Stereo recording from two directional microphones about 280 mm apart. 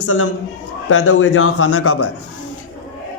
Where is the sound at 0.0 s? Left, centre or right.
Left.